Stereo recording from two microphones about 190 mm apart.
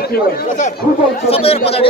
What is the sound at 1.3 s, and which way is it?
Speech, 30° left (ahead or behind).